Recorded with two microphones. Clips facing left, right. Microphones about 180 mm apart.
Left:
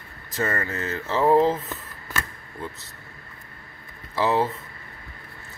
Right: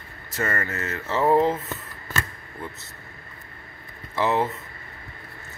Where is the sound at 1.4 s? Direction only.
10° right (ahead or behind).